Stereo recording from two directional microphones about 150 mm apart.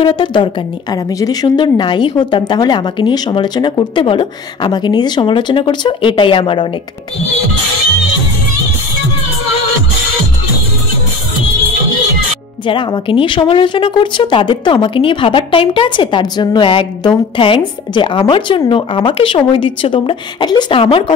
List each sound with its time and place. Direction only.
0.0 s a woman's voice: 30° left (ahead or behind)
12.6 s a woman's voice: 35° left (ahead or behind)